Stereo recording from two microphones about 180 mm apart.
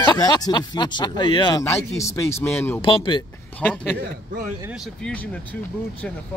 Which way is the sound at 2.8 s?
30° left (ahead or behind).